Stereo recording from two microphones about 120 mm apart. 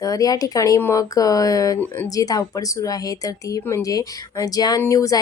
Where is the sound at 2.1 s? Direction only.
30° left (ahead or behind).